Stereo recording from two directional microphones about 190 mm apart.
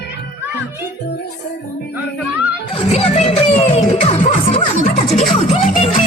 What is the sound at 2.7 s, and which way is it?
Music, 30° left (ahead or behind).